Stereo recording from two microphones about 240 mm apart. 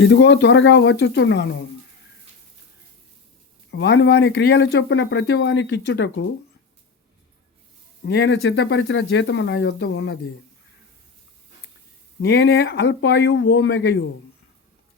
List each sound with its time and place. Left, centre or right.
0.0 s speech: left
3.7 s speech: left
8.0 s speech: left
12.2 s speech: left